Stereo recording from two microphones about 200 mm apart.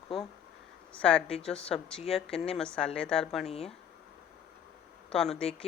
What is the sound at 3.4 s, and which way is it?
Speech, 30° left (ahead or behind).